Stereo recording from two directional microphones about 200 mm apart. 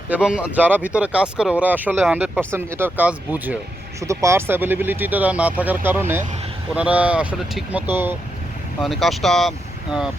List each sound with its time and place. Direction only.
0.1 s speech: 5° right (ahead or behind)
8.8 s speech: centre (ahead or behind)